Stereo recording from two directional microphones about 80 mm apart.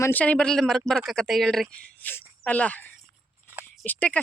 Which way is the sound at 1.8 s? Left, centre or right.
Left.